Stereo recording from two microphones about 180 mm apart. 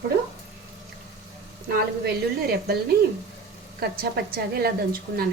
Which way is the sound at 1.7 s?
60° right (ahead or behind).